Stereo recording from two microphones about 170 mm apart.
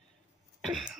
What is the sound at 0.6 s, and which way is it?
Cough, centre (ahead or behind).